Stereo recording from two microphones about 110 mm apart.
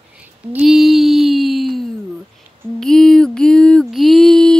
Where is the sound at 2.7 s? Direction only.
5° left (ahead or behind).